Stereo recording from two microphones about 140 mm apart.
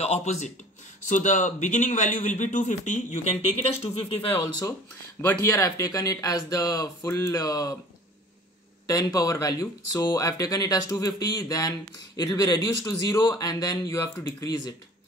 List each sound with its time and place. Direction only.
0.0 s a man's voice: 50° left (ahead or behind)
5.3 s speech: 20° left (ahead or behind)
8.8 s speech: 25° left (ahead or behind)